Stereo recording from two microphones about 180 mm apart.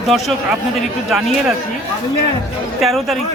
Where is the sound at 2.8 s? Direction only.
Centre (ahead or behind).